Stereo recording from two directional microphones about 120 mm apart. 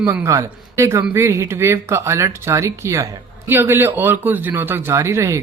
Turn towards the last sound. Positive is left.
turn(degrees=-25)  # may be behind; listen again after turning